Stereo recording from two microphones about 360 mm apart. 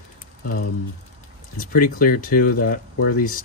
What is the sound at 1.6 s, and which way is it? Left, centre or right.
Speech, left.